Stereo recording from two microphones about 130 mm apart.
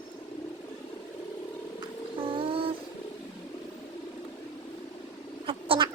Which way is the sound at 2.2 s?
45° right (ahead or behind).